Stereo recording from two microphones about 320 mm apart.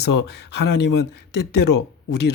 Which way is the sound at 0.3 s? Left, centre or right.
Left.